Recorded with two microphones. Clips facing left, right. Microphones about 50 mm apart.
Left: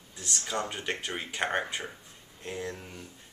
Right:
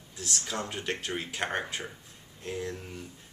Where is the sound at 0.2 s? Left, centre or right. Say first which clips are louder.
Left 1 dB; centre.